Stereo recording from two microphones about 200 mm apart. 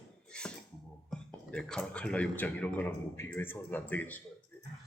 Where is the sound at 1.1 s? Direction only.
5° left (ahead or behind).